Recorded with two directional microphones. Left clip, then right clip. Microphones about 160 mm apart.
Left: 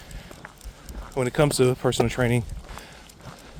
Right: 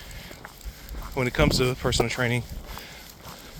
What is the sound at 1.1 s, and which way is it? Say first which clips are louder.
Speech: left 1 dB; 50° left (ahead or behind).